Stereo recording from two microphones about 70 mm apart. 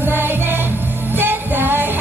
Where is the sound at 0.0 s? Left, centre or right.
Right.